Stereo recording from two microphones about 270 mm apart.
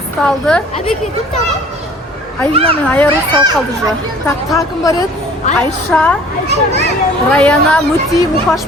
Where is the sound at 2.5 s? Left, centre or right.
Right.